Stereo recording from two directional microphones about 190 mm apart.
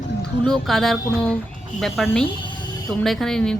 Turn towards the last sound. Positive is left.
turn(degrees=5)  # may be behind; listen again after turning